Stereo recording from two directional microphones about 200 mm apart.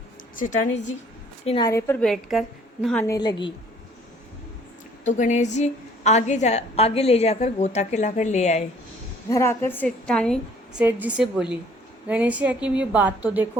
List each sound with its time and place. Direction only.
0.3 s a woman's voice: 40° left (ahead or behind)
1.5 s a woman's voice: 20° left (ahead or behind)
2.0 s a woman's voice: centre (ahead or behind)
3.1 s a woman's voice: 20° left (ahead or behind)
5.0 s a woman's voice: 40° left (ahead or behind)
9.3 s a woman's voice: 15° left (ahead or behind); by 13.5 s 10° right (ahead or behind)